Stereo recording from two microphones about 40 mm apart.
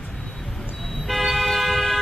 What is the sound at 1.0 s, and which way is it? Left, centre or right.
Toot, centre.